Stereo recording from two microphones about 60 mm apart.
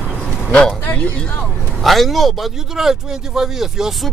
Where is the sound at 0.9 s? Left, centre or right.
Left.